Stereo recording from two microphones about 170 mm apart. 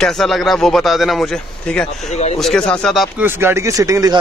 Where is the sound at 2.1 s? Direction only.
40° left (ahead or behind).